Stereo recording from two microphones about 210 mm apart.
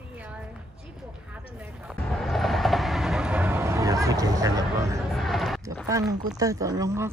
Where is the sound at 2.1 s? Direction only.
Centre (ahead or behind); by 5.0 s 15° right (ahead or behind).